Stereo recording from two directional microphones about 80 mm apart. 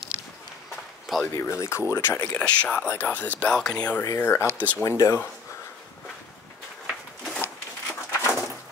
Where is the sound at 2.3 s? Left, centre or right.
Centre.